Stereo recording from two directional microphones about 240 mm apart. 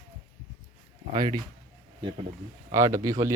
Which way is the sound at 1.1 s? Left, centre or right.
Centre.